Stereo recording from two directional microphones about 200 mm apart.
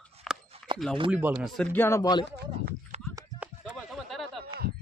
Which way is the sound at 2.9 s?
35° right (ahead or behind).